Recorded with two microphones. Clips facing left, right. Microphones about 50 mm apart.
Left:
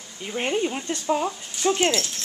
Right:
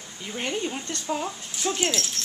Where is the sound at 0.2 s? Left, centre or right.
Centre.